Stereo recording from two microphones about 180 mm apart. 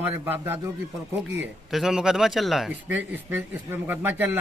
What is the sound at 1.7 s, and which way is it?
A man's voice, 5° right (ahead or behind).